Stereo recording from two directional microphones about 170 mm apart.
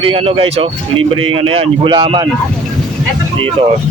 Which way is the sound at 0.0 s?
35° right (ahead or behind).